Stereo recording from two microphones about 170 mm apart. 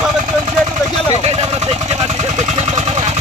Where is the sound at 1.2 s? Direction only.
35° right (ahead or behind).